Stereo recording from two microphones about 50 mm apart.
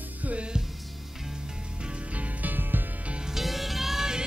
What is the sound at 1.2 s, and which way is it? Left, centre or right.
Music, centre.